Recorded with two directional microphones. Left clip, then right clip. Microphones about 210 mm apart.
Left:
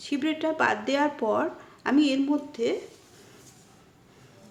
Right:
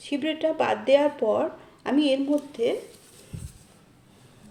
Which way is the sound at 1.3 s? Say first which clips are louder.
Right 2 dB; 15° left (ahead or behind).